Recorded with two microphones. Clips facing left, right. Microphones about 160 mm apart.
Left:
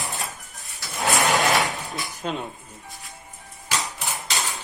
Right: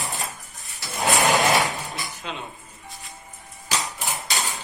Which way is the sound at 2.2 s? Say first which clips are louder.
Left 7 dB; 40° left (ahead or behind).